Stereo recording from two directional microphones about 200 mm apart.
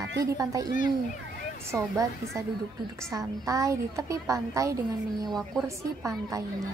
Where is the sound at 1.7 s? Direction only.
15° right (ahead or behind).